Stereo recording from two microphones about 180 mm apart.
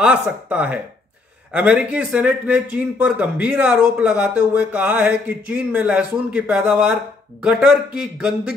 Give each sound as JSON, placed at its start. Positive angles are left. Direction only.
{"t": 0.0, "sound": "a man's voice", "side_deg": -5}